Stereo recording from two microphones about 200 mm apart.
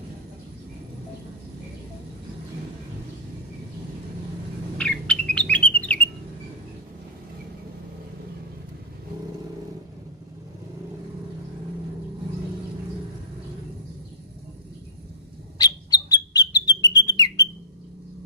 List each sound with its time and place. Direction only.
4.7 s bird: 5° left (ahead or behind)
15.5 s bird: 20° left (ahead or behind)